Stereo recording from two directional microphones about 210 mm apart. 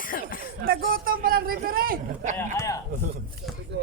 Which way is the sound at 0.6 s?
45° right (ahead or behind).